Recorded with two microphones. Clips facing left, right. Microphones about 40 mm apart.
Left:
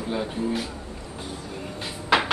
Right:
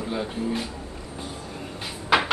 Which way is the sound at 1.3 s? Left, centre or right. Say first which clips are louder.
Left 1 dB; centre.